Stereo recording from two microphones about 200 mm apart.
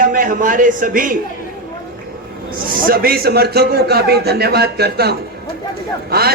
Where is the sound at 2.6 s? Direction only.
45° right (ahead or behind).